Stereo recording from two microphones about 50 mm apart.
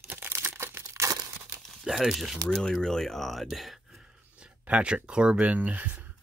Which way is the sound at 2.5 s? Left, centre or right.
Centre.